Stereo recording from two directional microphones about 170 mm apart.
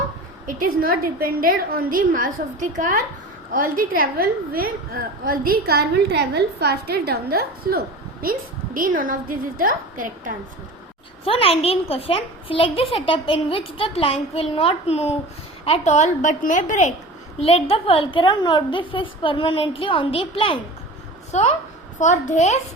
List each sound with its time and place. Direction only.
0.4 s a woman's voice: 55° right (ahead or behind)
11.3 s a child's voice: 35° left (ahead or behind)
17.4 s a child's voice: 35° left (ahead or behind)
21.3 s a woman's voice: 45° left (ahead or behind)